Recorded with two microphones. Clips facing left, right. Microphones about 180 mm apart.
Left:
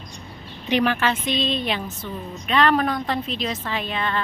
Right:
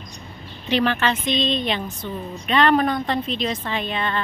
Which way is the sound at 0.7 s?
10° left (ahead or behind).